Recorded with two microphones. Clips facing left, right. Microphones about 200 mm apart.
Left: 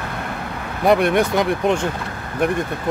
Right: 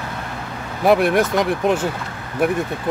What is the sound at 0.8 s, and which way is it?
Speech, centre (ahead or behind).